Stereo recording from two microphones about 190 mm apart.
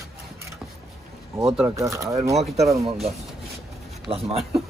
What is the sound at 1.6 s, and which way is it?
Speech, 15° right (ahead or behind).